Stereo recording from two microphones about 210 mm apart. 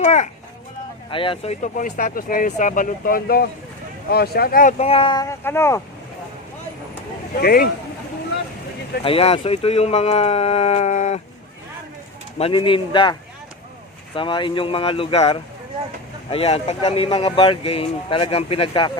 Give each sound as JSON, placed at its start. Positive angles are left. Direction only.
{"t": 0.0, "sound": "speech", "side_deg": 35}
{"t": 1.1, "sound": "speech", "side_deg": 25}
{"t": 4.8, "sound": "speech", "side_deg": 25}
{"t": 7.4, "sound": "speech", "side_deg": 45}
{"t": 9.0, "sound": "speech", "side_deg": 25}
{"t": 12.4, "sound": "speech", "side_deg": 25}
{"t": 14.2, "sound": "speech", "side_deg": 25}